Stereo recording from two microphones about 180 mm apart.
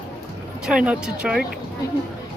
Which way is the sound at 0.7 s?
5° right (ahead or behind).